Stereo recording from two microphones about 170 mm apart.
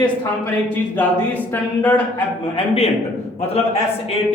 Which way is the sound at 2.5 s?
35° left (ahead or behind).